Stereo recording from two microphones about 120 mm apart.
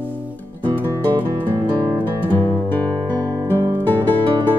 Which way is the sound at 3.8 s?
15° left (ahead or behind).